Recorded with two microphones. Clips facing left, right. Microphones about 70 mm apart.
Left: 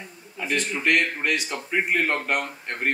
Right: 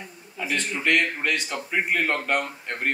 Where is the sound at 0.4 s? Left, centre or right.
Centre.